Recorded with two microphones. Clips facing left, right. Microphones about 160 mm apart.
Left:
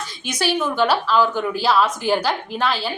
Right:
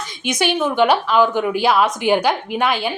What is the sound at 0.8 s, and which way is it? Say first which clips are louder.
A woman's voice: right 4 dB; 15° right (ahead or behind).